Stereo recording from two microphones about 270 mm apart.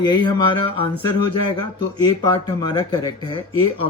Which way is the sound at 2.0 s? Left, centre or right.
Centre.